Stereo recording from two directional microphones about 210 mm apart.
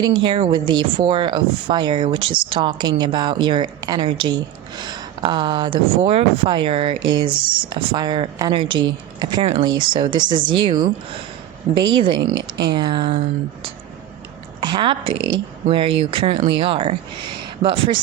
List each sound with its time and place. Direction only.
0.0 s speech: 25° right (ahead or behind)
12.2 s speech: 55° right (ahead or behind)
12.7 s speech: 20° right (ahead or behind)